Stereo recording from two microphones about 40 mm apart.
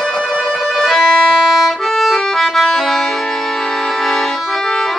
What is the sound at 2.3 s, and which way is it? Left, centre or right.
Music, centre.